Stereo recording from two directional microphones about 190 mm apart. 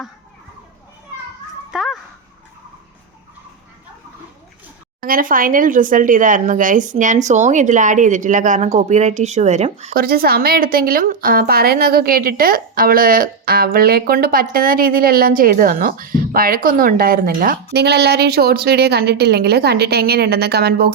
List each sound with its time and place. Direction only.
1.7 s dog: centre (ahead or behind)
4.9 s speech: 50° right (ahead or behind)
9.9 s speech: 50° right (ahead or behind)